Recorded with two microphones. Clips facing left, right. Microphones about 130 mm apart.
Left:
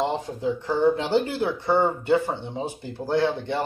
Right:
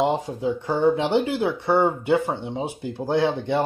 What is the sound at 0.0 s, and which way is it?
Speech, 15° right (ahead or behind).